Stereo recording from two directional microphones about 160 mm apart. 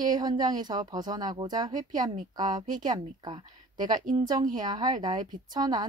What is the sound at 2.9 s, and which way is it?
Speech, 25° right (ahead or behind).